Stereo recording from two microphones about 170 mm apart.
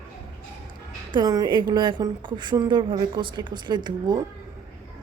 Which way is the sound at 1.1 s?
25° right (ahead or behind).